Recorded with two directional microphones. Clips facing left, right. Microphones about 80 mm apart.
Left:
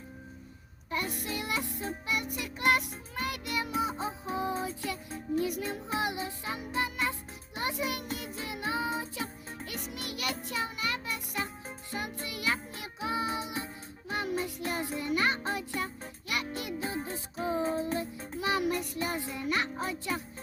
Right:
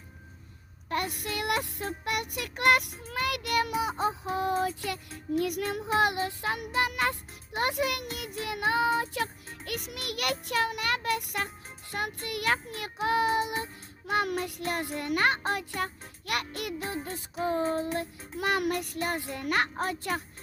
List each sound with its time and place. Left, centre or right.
0.9 s music: right